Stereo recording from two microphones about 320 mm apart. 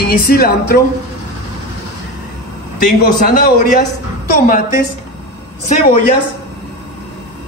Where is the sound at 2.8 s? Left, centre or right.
Left.